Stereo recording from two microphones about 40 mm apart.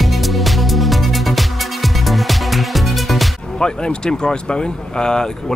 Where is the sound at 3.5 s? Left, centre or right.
Centre.